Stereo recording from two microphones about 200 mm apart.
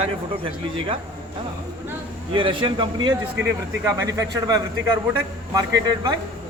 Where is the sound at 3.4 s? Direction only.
65° right (ahead or behind).